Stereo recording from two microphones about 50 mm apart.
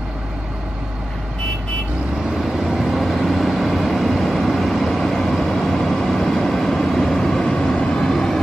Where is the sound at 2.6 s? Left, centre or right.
Centre.